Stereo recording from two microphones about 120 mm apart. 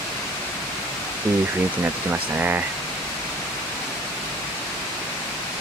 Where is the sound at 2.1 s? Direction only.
15° right (ahead or behind).